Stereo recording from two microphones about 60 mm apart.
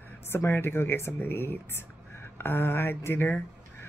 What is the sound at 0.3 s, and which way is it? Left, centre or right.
Speech, left.